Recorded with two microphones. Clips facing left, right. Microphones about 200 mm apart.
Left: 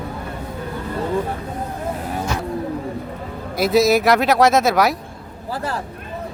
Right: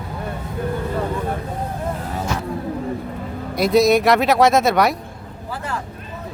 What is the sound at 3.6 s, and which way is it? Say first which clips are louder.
Speech: right 1 dB; centre (ahead or behind).